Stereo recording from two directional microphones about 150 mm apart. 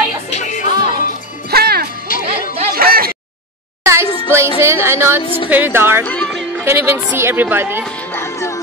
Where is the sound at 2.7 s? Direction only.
80° right.